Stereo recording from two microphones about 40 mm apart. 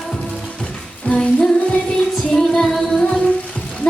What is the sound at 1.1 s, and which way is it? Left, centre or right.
Music, left.